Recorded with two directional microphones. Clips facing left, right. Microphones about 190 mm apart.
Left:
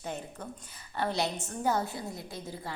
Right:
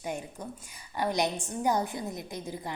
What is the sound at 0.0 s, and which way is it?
A woman's voice, 10° right (ahead or behind).